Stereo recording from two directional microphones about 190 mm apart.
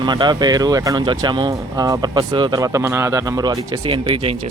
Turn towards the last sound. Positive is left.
turn(degrees=-30)  # may be behind; listen again after turning